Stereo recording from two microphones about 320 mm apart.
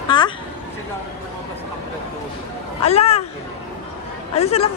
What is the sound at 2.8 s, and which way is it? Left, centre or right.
Speech, centre.